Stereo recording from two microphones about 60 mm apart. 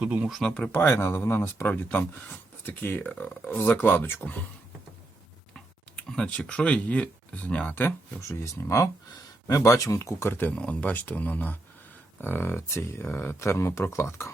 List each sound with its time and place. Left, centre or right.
0.0 s speech: right
0.4 s speech: centre
0.7 s speech: left
6.1 s speech: centre
8.3 s speech: left
10.2 s speech: left
10.5 s speech: left